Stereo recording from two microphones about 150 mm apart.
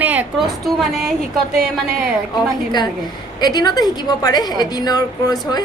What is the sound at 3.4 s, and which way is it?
A woman's voice, 25° left (ahead or behind).